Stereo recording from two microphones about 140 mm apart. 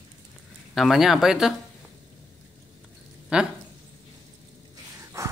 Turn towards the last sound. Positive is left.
turn(degrees=-20)  # may be behind; listen again after turning